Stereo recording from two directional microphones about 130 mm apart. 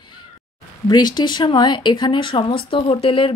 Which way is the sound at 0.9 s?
35° left (ahead or behind).